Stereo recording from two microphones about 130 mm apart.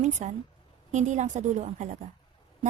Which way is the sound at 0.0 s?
60° right (ahead or behind).